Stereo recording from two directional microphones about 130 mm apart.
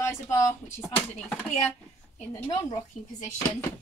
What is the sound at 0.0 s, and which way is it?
Speech, 20° left (ahead or behind).